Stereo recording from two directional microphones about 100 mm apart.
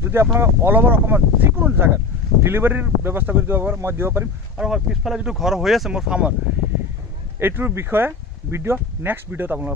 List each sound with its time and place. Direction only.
0.0 s speech: 25° right (ahead or behind)
4.6 s speech: 5° right (ahead or behind)
7.3 s speech: 20° right (ahead or behind)